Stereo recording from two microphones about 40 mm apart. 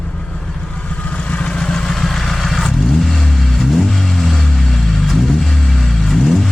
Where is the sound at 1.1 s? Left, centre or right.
Left.